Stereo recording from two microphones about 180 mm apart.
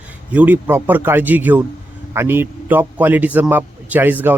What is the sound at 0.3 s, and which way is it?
Speech, 10° right (ahead or behind).